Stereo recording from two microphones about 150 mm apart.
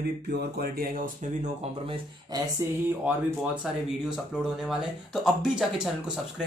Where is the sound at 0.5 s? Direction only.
75° right (ahead or behind).